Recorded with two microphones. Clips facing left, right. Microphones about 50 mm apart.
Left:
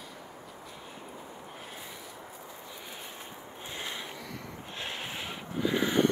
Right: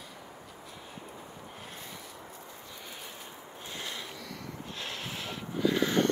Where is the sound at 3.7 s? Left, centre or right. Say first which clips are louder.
Left 1 dB; left.